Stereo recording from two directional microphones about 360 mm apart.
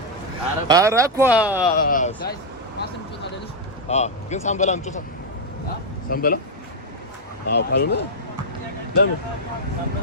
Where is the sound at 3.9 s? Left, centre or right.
Centre.